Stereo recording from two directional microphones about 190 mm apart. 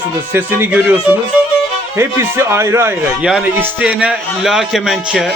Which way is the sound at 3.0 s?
5° right (ahead or behind).